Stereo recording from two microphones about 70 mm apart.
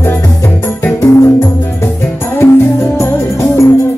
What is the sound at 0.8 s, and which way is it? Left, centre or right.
Music, left.